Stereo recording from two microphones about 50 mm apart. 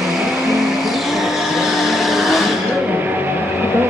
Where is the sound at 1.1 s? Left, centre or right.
Centre.